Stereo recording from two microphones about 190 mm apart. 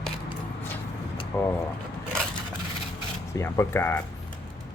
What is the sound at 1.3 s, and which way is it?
Speech, 15° left (ahead or behind).